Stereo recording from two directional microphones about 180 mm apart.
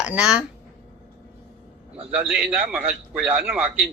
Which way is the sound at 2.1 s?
5° right (ahead or behind).